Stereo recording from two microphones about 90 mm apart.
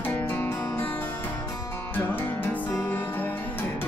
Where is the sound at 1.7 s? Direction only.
25° left (ahead or behind).